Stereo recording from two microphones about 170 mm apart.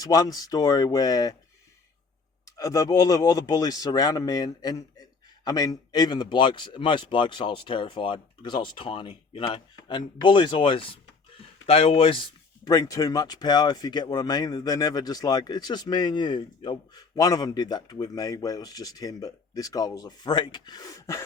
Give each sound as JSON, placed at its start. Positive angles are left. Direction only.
{"t": 0.0, "sound": "speech", "side_deg": 20}
{"t": 2.4, "sound": "speech", "side_deg": 20}
{"t": 12.6, "sound": "speech", "side_deg": 20}